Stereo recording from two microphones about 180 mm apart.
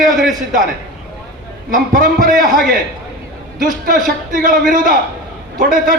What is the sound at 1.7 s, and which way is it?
Speech, 45° right (ahead or behind).